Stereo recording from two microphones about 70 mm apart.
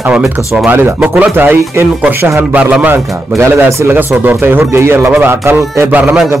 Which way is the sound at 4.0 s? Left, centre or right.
Right.